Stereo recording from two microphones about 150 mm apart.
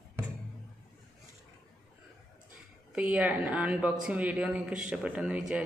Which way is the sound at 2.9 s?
5° right (ahead or behind).